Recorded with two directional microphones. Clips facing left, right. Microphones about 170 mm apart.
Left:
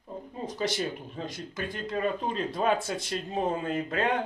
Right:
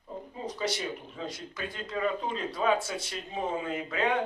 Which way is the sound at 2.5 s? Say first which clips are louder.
Right 1 dB; 50° left (ahead or behind).